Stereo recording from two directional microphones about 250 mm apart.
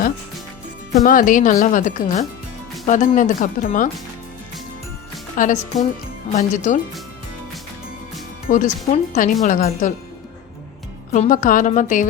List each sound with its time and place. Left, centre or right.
1.0 s speech: left
5.4 s speech: left
8.4 s speech: left
11.1 s speech: left